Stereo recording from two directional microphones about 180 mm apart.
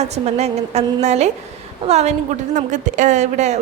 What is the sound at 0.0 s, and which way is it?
A woman's voice, 35° right (ahead or behind).